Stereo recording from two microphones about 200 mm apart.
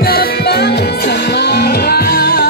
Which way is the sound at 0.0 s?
50° left (ahead or behind).